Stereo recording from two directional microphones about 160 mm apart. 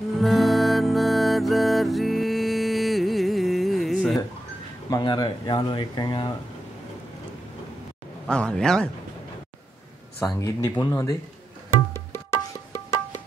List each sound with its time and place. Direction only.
0.2 s music: centre (ahead or behind)
4.8 s speech: 25° left (ahead or behind)
8.3 s speech: 5° left (ahead or behind)
10.1 s speech: 20° left (ahead or behind)
11.9 s tabla: 15° left (ahead or behind)